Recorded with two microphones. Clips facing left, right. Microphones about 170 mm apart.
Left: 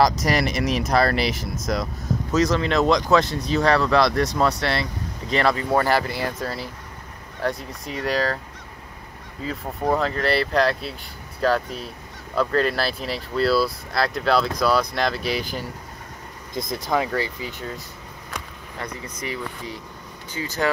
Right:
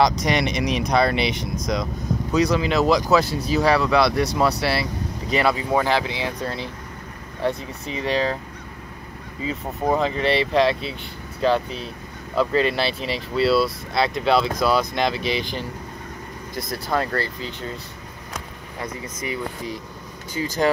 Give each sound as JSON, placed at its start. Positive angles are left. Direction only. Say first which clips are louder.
{"t": 0.0, "sound": "speech", "louder": "even", "side_deg": 0}
{"t": 5.9, "sound": "speech", "louder": "even", "side_deg": 5}
{"t": 9.4, "sound": "speech", "louder": "right 1 dB", "side_deg": 0}
{"t": 16.7, "sound": "speech", "louder": "left 1 dB", "side_deg": 10}
{"t": 20.4, "sound": "speech", "louder": "right 4 dB", "side_deg": -25}